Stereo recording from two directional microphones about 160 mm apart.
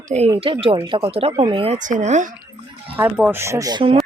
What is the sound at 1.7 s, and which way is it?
Speech, 50° right (ahead or behind).